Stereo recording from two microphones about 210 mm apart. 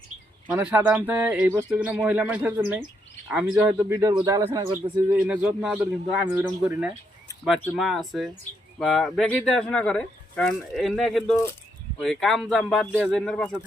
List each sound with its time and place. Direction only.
0.4 s speech: 5° right (ahead or behind)
5.0 s speech: 5° right (ahead or behind)